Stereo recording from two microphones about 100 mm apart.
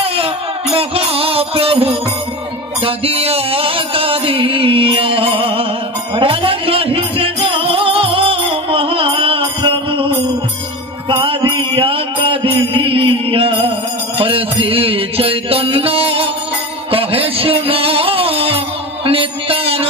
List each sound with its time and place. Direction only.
0.0 s music: 70° right (ahead or behind)
11.1 s mantra: 60° right (ahead or behind)
16.9 s music: 65° right (ahead or behind)